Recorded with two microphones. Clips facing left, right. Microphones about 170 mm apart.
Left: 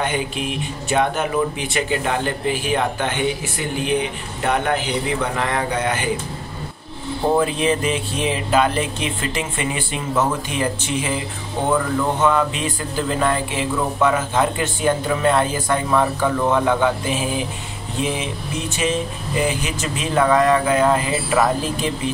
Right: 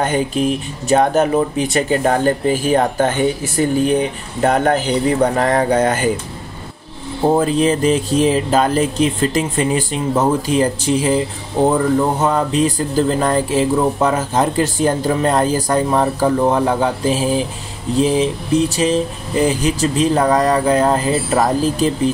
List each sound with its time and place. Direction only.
0.0 s speech: 40° right (ahead or behind)
7.3 s speech: 40° right (ahead or behind)